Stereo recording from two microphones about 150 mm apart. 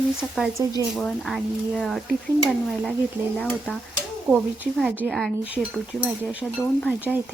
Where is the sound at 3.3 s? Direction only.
10° left (ahead or behind).